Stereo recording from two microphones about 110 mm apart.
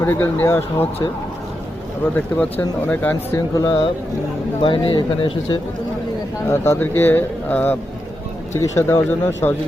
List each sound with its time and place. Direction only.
0.0 s speech: 20° left (ahead or behind)
2.1 s speech: 15° left (ahead or behind)
4.6 s speech: 50° left (ahead or behind)
6.5 s speech: 20° left (ahead or behind)
8.5 s speech: 25° left (ahead or behind)